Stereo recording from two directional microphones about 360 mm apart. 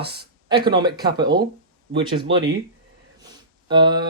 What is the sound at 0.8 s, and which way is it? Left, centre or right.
Speech, centre.